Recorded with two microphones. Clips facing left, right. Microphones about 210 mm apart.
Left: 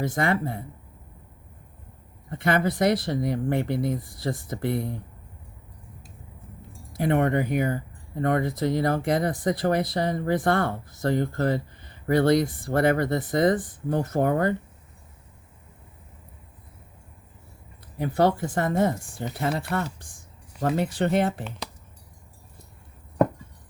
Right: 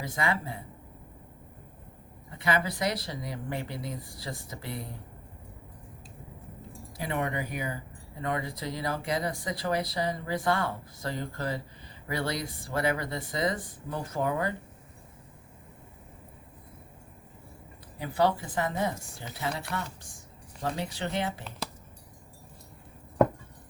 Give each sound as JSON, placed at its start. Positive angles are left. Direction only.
{"t": 0.1, "sound": "speech", "side_deg": 60}
{"t": 2.3, "sound": "speech", "side_deg": 55}
{"t": 6.9, "sound": "speech", "side_deg": 55}
{"t": 18.0, "sound": "speech", "side_deg": 50}